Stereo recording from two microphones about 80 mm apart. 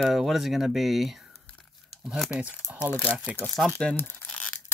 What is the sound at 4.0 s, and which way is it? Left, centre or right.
Crumpling, left.